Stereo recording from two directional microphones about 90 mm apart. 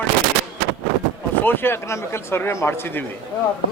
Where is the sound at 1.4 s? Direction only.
25° left (ahead or behind).